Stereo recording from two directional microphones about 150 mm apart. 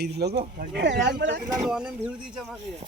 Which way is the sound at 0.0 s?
90° right.